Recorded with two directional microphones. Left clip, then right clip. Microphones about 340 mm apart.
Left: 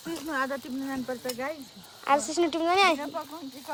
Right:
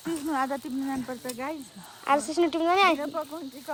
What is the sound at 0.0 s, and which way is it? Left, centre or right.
Speech, centre.